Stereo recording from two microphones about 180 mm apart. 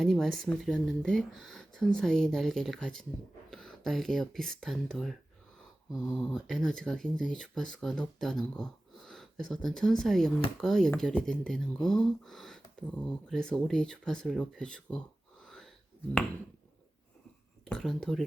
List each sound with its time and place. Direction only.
0.0 s speech: centre (ahead or behind)
17.7 s speech: 5° left (ahead or behind)